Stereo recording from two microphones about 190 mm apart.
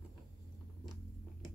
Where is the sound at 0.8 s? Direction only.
Centre (ahead or behind).